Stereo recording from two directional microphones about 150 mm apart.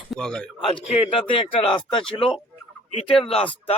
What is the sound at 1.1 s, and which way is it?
Speech, 35° left (ahead or behind).